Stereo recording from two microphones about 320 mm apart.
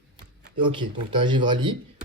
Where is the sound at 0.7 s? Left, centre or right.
Centre.